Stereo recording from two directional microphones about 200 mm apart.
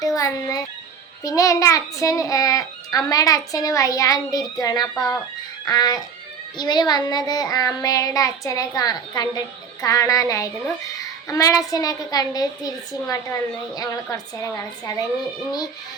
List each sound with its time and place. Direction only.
0.0 s a child's voice: 15° left (ahead or behind)
5.6 s child singing: 20° left (ahead or behind)
9.8 s a child's voice: 15° left (ahead or behind)